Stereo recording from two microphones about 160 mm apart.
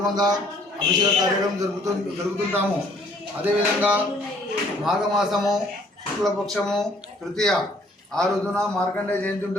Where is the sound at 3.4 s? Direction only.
10° right (ahead or behind).